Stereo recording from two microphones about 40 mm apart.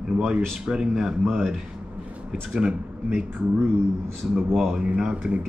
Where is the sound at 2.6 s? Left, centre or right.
Right.